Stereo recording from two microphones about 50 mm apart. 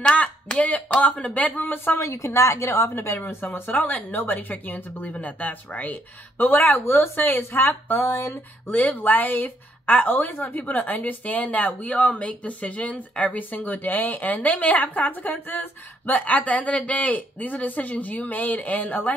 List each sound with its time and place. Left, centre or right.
0.0 s a sound: left
0.8 s a woman's voice: left
2.0 s a woman's voice: left
2.9 s speech: left
3.3 s a woman's voice: left
8.1 s speech: left
8.6 s a woman's voice: left